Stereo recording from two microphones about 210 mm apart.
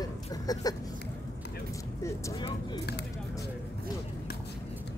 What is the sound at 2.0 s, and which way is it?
Speech, 15° left (ahead or behind).